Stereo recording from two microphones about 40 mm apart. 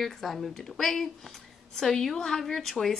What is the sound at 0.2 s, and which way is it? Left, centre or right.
Speech, centre.